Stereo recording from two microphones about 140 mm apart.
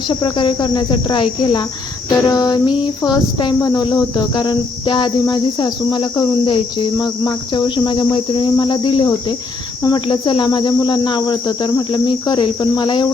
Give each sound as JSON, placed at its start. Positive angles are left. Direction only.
{"t": 0.1, "sound": "cricket", "side_deg": 35}